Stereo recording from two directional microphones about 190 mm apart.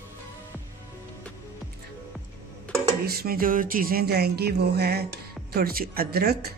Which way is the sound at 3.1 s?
50° right (ahead or behind).